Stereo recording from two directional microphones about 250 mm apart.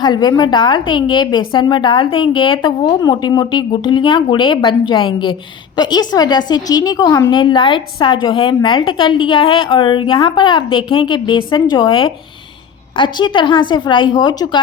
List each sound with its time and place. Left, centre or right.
0.0 s a woman's voice: centre